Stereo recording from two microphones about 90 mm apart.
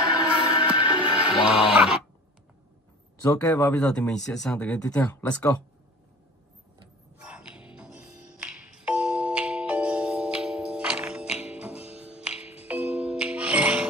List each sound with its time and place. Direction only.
0.2 s music: 65° left (ahead or behind)
0.7 s music: 75° left (ahead or behind)
1.5 s speech: 5° right (ahead or behind)
3.2 s speech: 40° left (ahead or behind)
3.6 s speech: 15° left (ahead or behind)
5.0 s speech: 25° left (ahead or behind)
7.2 s music: 10° right (ahead or behind)